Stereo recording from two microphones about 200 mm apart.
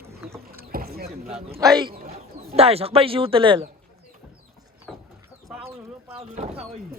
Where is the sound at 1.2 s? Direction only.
30° right (ahead or behind).